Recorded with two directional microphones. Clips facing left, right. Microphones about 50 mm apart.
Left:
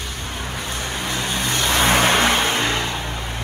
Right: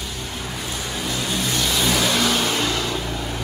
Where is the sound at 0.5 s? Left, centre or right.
Left.